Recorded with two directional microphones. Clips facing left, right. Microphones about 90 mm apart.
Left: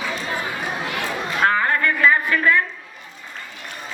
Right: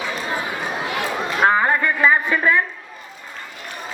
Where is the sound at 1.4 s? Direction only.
20° right (ahead or behind).